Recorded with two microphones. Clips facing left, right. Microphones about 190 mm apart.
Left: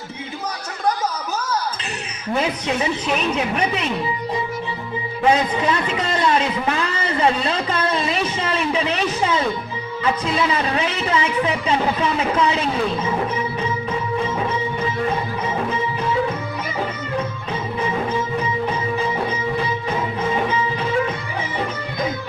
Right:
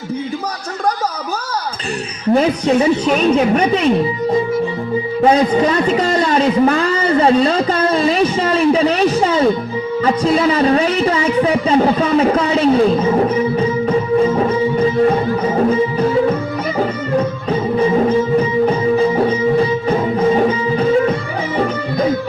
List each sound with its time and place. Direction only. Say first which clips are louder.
2.3 s a man's voice: right 9 dB; 35° right (ahead or behind)
15.4 s music: right 9 dB; 40° right (ahead or behind)